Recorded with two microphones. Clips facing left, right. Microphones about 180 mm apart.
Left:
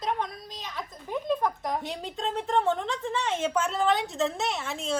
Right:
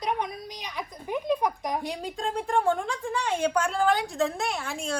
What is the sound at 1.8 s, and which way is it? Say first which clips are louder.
A woman's voice: right 1 dB; centre (ahead or behind).